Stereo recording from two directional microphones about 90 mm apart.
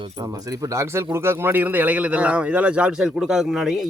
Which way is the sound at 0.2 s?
40° right (ahead or behind).